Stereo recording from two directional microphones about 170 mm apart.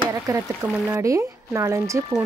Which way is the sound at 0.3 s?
20° right (ahead or behind).